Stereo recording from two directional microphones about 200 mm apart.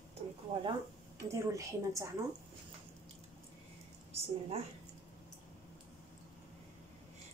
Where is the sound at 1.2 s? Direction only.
15° right (ahead or behind).